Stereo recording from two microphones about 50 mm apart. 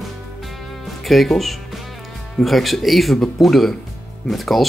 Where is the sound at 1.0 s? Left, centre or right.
Centre.